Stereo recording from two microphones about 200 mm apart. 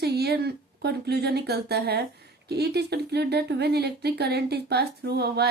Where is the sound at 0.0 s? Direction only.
55° right (ahead or behind).